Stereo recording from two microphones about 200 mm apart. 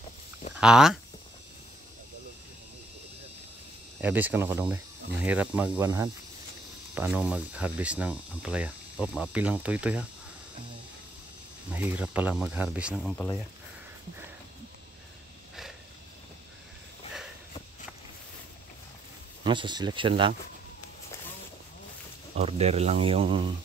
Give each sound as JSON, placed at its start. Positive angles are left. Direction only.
{"t": 0.6, "sound": "speech", "side_deg": -5}
{"t": 4.0, "sound": "speech", "side_deg": -10}
{"t": 11.7, "sound": "speech", "side_deg": -10}
{"t": 19.4, "sound": "speech", "side_deg": -25}
{"t": 22.3, "sound": "speech", "side_deg": -30}